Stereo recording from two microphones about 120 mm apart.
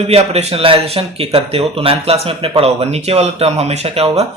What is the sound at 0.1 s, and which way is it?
Speech, 60° right (ahead or behind).